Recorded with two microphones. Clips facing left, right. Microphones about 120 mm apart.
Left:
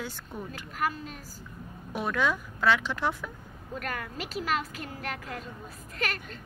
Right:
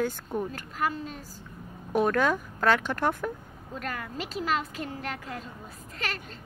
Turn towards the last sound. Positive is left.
turn(degrees=-30)  # may be behind; listen again after turning